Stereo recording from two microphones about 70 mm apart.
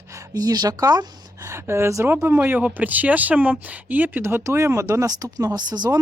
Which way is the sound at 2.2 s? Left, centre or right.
Right.